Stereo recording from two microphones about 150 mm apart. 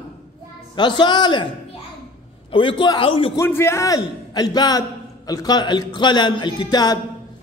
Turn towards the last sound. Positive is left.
turn(degrees=25)  # may be behind; listen again after turning